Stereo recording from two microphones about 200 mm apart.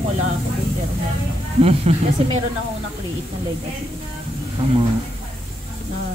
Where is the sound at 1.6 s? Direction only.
30° right (ahead or behind).